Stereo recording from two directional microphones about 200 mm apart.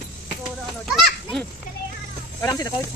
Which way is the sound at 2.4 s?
20° left (ahead or behind).